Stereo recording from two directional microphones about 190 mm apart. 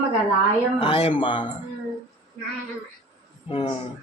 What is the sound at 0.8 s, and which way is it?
Speech, 30° left (ahead or behind).